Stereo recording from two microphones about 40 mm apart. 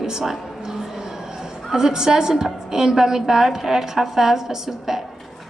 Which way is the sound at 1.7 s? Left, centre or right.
Centre.